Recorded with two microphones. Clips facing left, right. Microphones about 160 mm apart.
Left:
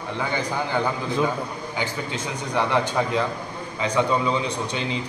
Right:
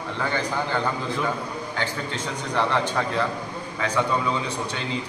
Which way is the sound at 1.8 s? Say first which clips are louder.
Left 2 dB; 15° left (ahead or behind).